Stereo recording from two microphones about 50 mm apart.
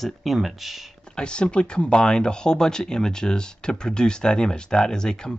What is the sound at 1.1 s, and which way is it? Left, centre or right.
Speech, centre.